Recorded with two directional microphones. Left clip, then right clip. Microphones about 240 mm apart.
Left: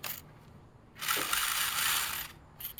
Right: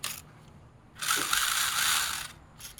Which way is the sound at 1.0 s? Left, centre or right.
Centre.